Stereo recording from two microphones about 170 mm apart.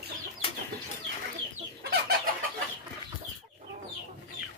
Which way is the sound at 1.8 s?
65° right (ahead or behind).